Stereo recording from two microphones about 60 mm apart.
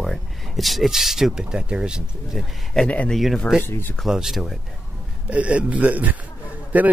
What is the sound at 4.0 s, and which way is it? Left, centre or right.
Speech, centre.